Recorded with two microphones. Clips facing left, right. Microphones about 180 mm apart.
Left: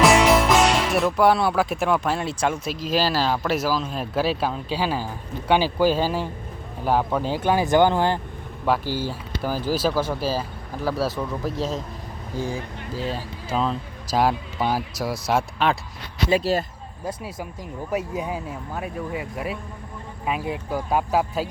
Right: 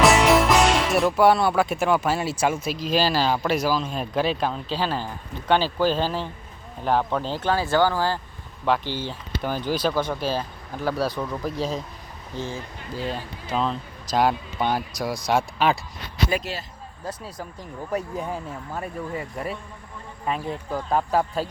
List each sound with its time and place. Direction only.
0.0 s speech: centre (ahead or behind); by 8.2 s 20° left (ahead or behind)
8.6 s speech: 10° left (ahead or behind)
12.4 s speech: 15° left (ahead or behind)
12.9 s speech: centre (ahead or behind)
16.3 s speech: 35° left (ahead or behind)
17.1 s speech: 10° left (ahead or behind)